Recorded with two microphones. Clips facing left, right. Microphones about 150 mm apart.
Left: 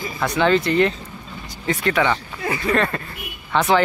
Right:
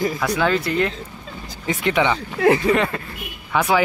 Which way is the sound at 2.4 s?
90° right.